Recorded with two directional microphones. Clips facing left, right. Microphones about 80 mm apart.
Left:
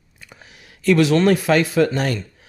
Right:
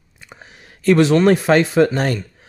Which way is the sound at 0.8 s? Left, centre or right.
Right.